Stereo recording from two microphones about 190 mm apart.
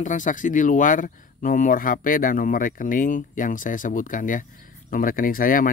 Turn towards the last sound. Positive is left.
turn(degrees=45)  # may be behind; listen again after turning